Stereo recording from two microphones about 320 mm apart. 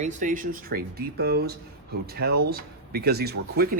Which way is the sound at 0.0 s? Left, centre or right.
Right.